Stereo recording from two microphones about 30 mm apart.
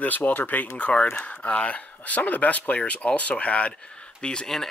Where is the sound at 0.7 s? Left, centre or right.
Left.